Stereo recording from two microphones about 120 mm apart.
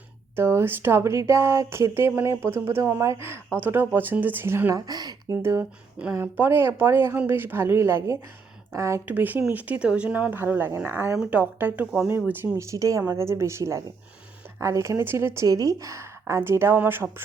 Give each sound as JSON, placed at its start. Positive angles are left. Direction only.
{"t": 0.3, "sound": "speech", "side_deg": -20}
{"t": 4.9, "sound": "speech", "side_deg": -35}
{"t": 5.4, "sound": "speech", "side_deg": -25}
{"t": 9.0, "sound": "speech", "side_deg": -15}